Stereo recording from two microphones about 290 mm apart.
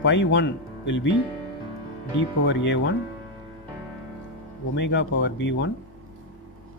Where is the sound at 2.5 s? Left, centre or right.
Left.